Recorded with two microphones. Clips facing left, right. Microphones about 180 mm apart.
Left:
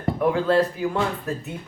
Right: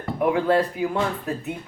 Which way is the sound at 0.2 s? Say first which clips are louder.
Even; 15° right (ahead or behind).